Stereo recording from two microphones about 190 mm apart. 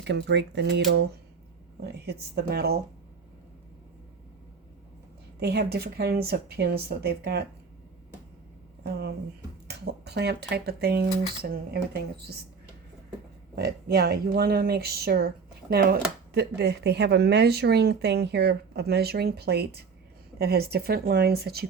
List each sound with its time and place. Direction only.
0.0 s speech: 65° right (ahead or behind)
5.4 s speech: 60° right (ahead or behind)
9.6 s speech: 60° right (ahead or behind)
13.6 s speech: 55° right (ahead or behind)